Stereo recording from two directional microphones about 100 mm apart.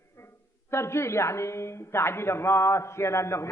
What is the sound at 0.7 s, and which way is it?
A man's voice, 25° left (ahead or behind).